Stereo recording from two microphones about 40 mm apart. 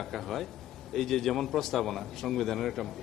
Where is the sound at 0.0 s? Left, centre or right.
Centre.